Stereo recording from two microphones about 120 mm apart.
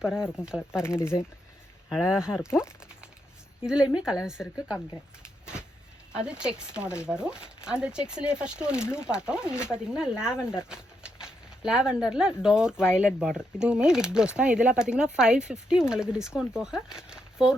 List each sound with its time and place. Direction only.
0.0 s speech: 5° right (ahead or behind)
0.8 s speech: 20° left (ahead or behind)
1.9 s speech: 5° right (ahead or behind)
3.6 s speech: 5° right (ahead or behind)
6.1 s speech: 10° right (ahead or behind)